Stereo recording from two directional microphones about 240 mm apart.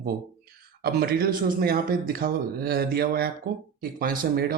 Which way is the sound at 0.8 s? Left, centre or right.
Right.